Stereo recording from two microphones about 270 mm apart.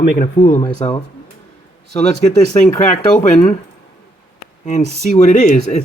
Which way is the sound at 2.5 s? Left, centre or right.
Left.